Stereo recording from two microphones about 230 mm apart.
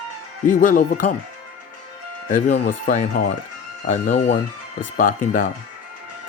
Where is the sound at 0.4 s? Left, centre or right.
Left.